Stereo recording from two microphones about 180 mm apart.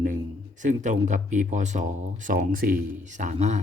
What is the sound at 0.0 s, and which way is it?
Speech, 45° right (ahead or behind).